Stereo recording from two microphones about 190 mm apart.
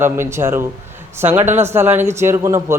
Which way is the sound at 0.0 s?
15° right (ahead or behind).